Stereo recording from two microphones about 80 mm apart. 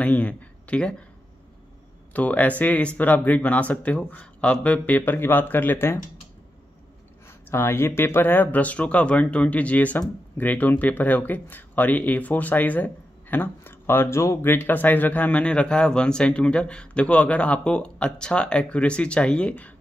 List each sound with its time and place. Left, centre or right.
0.0 s speech: centre
2.1 s speech: centre
7.5 s speech: left